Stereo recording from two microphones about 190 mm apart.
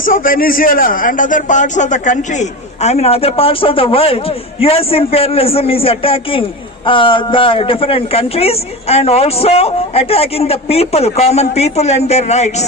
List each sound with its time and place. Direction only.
0.0 s a man's voice: 45° left (ahead or behind)